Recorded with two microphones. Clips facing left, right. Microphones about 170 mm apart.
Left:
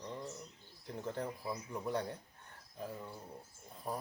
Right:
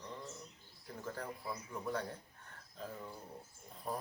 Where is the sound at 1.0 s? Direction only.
20° left (ahead or behind); by 4.0 s centre (ahead or behind).